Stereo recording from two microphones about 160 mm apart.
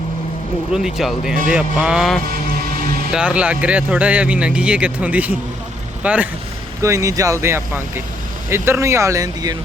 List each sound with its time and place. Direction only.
0.7 s speech: 5° right (ahead or behind)
6.8 s speech: 20° right (ahead or behind)